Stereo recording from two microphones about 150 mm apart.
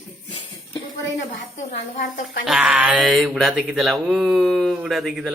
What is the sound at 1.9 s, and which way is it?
Speech, 75° left (ahead or behind).